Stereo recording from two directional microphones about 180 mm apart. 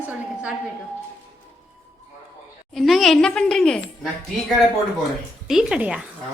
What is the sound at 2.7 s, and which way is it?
Speech, centre (ahead or behind).